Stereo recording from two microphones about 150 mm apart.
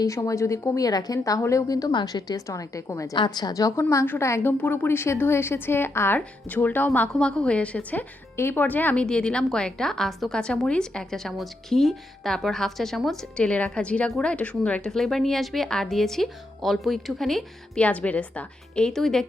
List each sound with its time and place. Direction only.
0.0 s a woman's voice: 20° left (ahead or behind); by 19.2 s 5° left (ahead or behind)